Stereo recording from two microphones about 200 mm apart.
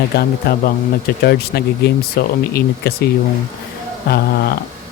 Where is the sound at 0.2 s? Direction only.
50° left (ahead or behind).